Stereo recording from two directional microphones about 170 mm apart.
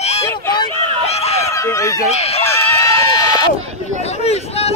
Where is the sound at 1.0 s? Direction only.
40° left (ahead or behind).